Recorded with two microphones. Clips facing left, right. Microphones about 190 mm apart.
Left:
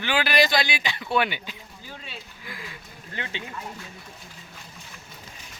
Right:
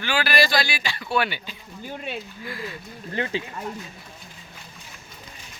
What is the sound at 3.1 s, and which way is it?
Speech, 35° right (ahead or behind).